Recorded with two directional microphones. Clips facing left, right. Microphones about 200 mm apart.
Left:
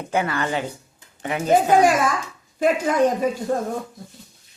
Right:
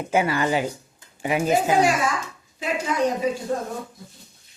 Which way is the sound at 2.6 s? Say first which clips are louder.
Left 6 dB; 50° left (ahead or behind).